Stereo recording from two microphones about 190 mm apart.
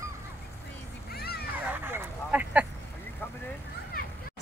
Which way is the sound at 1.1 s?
55° left (ahead or behind).